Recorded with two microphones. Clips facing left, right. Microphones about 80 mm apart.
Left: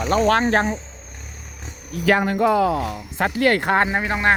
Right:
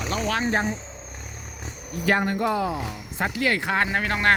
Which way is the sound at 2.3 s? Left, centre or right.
Left.